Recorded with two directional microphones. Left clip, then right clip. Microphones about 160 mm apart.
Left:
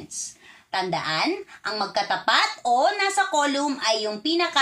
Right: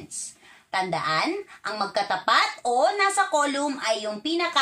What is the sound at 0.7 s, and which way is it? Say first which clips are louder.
Speech: right 1 dB; 20° right (ahead or behind).